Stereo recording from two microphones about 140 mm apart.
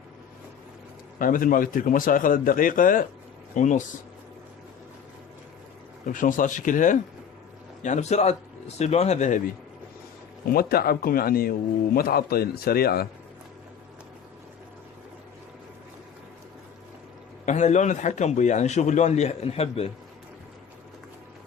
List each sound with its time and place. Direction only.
1.2 s speech: 80° left
3.5 s speech: 60° left (ahead or behind)
6.1 s speech: 70° left (ahead or behind)
10.4 s a man's voice: 90° left
17.4 s a man's voice: 55° left (ahead or behind)